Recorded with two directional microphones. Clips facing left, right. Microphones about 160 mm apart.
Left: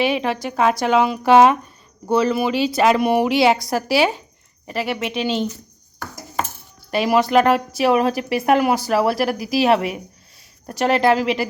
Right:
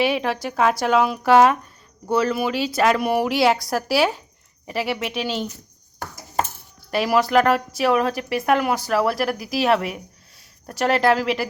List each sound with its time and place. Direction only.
0.0 s speech: 5° right (ahead or behind)
3.0 s speech: 25° left (ahead or behind)
3.4 s speech: centre (ahead or behind)
6.9 s speech: 5° right (ahead or behind)